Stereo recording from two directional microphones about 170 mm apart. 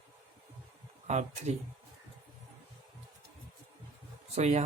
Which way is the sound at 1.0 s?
40° right (ahead or behind).